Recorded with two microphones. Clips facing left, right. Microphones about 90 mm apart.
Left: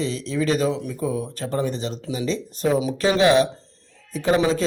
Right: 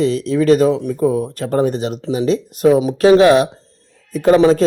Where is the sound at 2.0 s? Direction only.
35° right (ahead or behind).